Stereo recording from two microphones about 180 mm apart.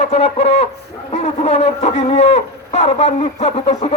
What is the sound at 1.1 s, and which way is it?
Speech, 35° left (ahead or behind).